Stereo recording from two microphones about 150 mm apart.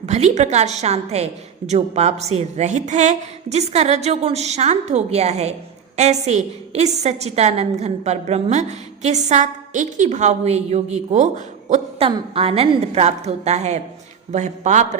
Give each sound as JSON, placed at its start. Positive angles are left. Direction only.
{"t": 0.0, "sound": "a woman's voice", "side_deg": -50}